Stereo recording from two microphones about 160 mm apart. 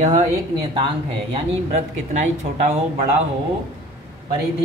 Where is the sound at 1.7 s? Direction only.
50° right (ahead or behind).